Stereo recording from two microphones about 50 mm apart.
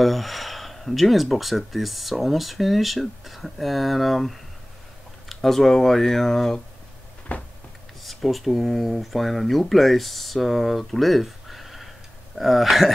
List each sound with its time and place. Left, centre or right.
0.0 s speech: centre
7.3 s a sound: left
8.0 s speech: centre